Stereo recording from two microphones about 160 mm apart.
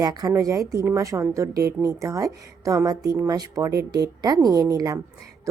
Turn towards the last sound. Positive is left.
turn(degrees=-20)  # may be behind; listen again after turning